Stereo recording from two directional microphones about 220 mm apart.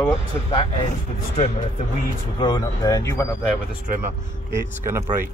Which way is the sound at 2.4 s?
20° left (ahead or behind).